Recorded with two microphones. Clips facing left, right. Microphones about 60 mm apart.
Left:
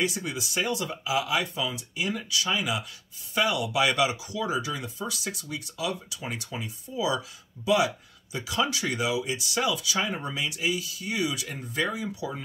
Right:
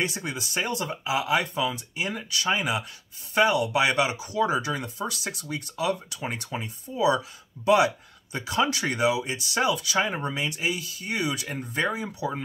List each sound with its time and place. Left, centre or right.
0.0 s speech: right
3.8 s speech: right
4.3 s speech: right